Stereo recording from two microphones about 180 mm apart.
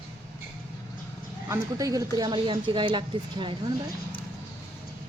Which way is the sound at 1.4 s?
20° right (ahead or behind).